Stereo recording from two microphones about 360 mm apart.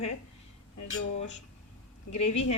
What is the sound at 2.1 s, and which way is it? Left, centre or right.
Speech, left.